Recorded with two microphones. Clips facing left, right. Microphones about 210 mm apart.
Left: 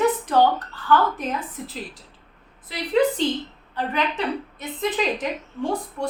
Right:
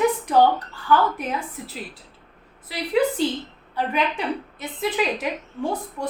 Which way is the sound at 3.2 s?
10° right (ahead or behind).